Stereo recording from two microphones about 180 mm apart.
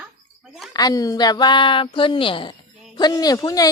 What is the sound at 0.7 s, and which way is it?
Speech, 20° left (ahead or behind).